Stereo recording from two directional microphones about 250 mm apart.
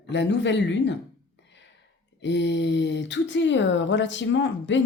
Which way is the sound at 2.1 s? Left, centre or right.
Left.